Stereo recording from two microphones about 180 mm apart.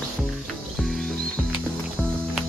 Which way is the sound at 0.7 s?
Centre (ahead or behind).